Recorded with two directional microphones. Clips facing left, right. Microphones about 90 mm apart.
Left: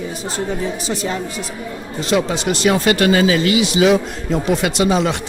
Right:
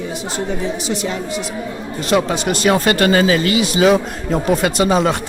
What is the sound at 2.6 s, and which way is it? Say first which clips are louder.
Speech: even; 45° right (ahead or behind).